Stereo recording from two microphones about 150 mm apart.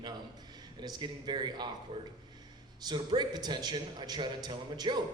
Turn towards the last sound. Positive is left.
turn(degrees=-30)  # may be behind; listen again after turning